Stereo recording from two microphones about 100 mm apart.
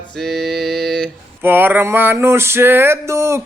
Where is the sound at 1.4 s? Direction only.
20° right (ahead or behind).